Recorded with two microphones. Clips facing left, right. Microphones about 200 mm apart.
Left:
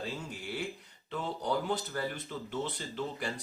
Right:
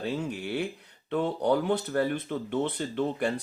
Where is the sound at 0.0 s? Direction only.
60° right (ahead or behind).